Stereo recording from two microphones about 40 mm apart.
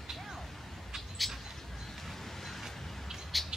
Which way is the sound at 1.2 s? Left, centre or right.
Centre.